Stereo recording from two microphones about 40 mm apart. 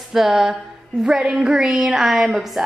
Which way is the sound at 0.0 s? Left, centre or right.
Centre.